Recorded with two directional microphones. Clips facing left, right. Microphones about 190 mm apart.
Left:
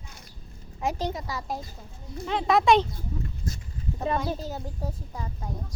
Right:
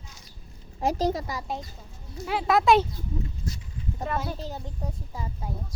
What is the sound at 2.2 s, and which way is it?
Speech, 5° right (ahead or behind).